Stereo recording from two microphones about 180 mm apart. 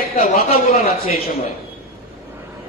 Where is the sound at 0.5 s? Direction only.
35° left (ahead or behind).